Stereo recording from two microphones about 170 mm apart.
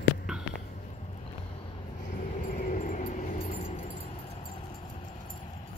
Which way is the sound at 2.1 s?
45° left (ahead or behind).